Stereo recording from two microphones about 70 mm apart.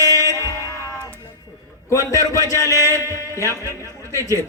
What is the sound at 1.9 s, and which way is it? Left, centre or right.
A man's voice, left.